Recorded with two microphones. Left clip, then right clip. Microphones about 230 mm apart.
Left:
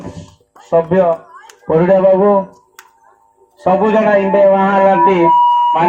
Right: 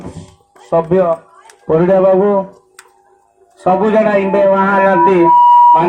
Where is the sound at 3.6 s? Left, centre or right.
Right.